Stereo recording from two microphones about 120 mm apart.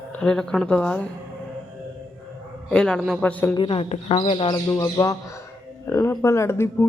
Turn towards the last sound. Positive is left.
turn(degrees=20)  # may be behind; listen again after turning